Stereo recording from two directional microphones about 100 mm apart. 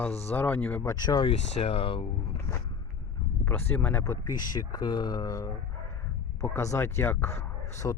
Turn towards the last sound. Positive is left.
turn(degrees=35)  # may be behind; listen again after turning